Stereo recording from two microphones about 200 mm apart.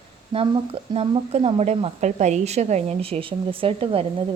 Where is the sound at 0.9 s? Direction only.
30° right (ahead or behind).